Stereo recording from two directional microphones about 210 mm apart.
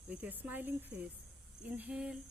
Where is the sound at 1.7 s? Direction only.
5° right (ahead or behind).